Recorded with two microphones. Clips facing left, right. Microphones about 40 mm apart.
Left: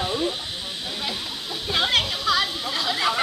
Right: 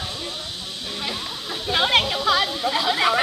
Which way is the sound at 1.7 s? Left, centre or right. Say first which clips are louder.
Right 3 dB; centre.